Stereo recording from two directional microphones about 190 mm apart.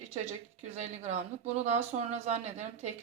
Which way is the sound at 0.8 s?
40° right (ahead or behind).